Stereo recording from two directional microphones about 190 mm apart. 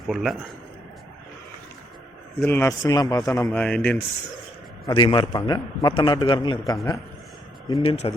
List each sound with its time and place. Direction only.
0.1 s a man's voice: centre (ahead or behind)
2.4 s speech: 15° left (ahead or behind)
4.9 s a man's voice: 25° left (ahead or behind)
7.8 s a man's voice: 30° left (ahead or behind)